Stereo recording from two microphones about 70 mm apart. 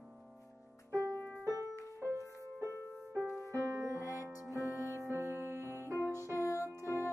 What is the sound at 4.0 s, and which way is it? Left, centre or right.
Music, left.